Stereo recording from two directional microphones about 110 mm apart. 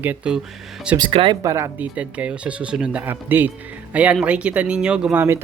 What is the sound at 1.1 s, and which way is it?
Speech, 55° right (ahead or behind).